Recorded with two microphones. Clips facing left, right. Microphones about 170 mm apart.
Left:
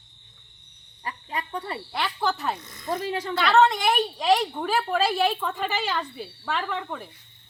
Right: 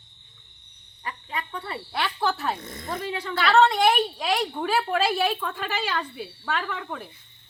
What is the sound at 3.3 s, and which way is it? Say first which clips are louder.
A woman's voice: even; centre (ahead or behind).